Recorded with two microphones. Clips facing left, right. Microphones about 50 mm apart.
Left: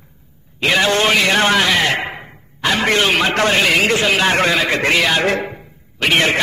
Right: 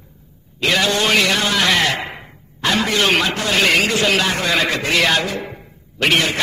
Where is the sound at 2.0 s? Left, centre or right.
Centre.